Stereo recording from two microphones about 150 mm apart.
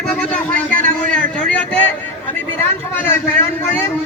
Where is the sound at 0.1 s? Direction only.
10° left (ahead or behind).